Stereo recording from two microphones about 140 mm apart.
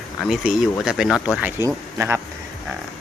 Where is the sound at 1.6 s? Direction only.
20° right (ahead or behind).